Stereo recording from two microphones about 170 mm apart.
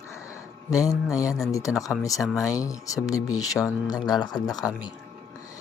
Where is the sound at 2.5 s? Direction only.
20° left (ahead or behind).